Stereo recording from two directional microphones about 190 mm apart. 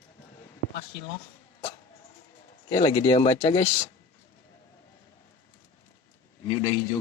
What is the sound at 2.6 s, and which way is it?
Speech, 25° left (ahead or behind).